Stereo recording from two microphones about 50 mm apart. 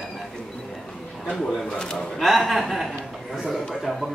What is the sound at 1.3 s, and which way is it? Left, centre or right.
Speech, centre.